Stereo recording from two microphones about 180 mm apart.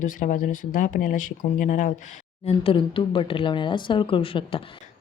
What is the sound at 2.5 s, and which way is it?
Speech, 30° left (ahead or behind).